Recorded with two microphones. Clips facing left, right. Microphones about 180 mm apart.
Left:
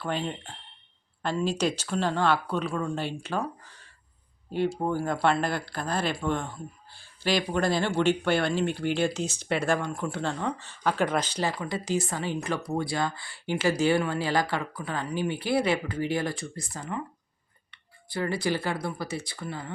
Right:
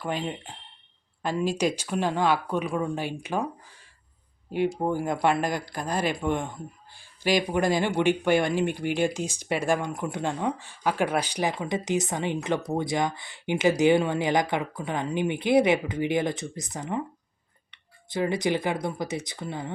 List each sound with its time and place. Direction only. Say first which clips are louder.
0.0 s speech: right 1 dB; 10° right (ahead or behind)
4.5 s speech: right 1 dB; 15° right (ahead or behind)